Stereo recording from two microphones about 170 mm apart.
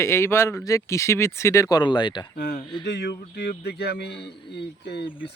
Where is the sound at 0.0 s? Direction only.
15° left (ahead or behind).